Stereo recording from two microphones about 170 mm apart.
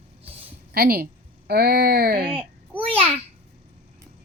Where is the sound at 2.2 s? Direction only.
30° right (ahead or behind).